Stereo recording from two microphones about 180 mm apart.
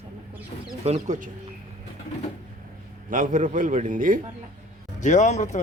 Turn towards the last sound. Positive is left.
turn(degrees=40)  # may be behind; listen again after turning